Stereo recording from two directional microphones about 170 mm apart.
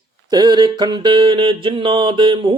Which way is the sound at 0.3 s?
25° right (ahead or behind).